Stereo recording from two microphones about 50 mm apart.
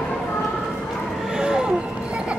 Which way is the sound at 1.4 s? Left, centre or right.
Centre.